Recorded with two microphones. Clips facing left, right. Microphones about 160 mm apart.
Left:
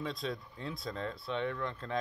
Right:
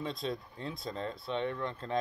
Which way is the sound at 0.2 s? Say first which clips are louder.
Right 2 dB; 30° right (ahead or behind).